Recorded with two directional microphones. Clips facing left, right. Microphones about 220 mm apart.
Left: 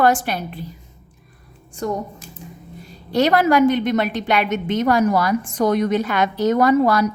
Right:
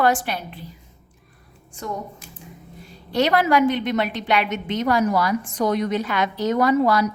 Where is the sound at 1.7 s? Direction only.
40° left (ahead or behind).